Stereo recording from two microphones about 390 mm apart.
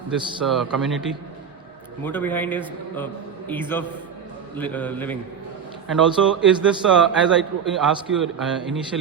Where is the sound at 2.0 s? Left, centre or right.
Centre.